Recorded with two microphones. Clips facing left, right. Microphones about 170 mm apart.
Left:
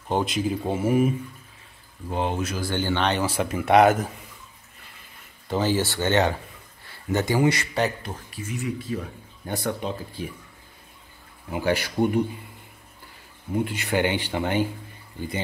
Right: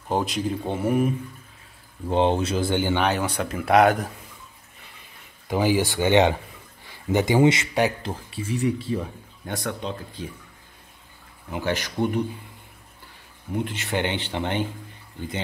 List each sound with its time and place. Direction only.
0.1 s speech: centre (ahead or behind)
2.0 s speech: 30° right (ahead or behind); by 3.2 s 10° right (ahead or behind)
3.2 s speech: 5° left (ahead or behind)
5.5 s speech: 15° right (ahead or behind); by 9.0 s 30° right (ahead or behind)
9.5 s speech: 5° left (ahead or behind)
11.5 s speech: 10° left (ahead or behind)
13.5 s speech: 10° left (ahead or behind)